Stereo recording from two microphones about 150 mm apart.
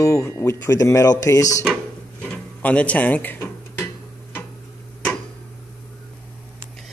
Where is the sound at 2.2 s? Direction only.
10° left (ahead or behind).